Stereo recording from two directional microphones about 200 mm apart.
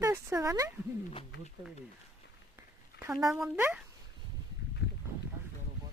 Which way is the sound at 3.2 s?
Centre (ahead or behind).